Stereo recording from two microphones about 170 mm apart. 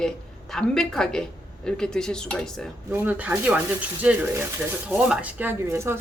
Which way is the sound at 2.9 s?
10° right (ahead or behind).